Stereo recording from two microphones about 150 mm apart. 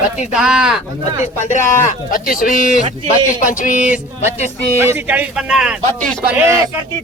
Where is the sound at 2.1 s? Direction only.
70° left (ahead or behind).